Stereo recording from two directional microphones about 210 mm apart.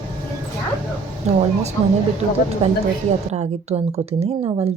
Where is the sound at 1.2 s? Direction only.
30° right (ahead or behind).